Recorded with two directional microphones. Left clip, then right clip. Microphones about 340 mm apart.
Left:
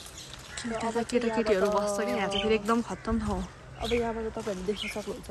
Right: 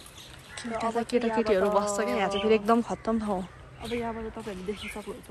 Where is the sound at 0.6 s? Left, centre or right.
Centre.